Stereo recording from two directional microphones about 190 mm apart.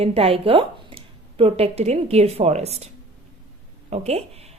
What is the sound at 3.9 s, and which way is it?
Speech, 35° right (ahead or behind).